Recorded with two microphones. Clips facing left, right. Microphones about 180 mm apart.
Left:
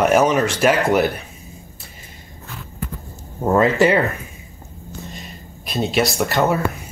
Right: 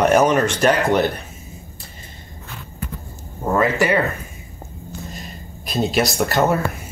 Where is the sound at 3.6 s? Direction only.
20° left (ahead or behind).